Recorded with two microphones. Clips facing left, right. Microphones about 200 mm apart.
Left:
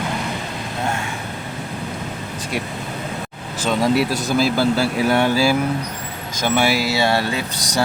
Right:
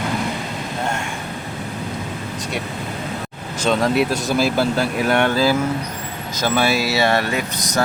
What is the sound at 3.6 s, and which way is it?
Speech, 5° left (ahead or behind).